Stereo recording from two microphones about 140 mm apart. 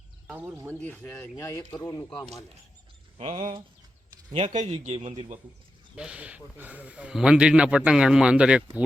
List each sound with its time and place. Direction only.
0.3 s a man's voice: 10° right (ahead or behind)
0.8 s speech: 10° left (ahead or behind)
3.2 s a man's voice: 50° right (ahead or behind)
6.0 s a man's voice: 10° right (ahead or behind)